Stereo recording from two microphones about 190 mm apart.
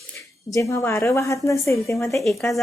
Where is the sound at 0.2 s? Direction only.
15° left (ahead or behind).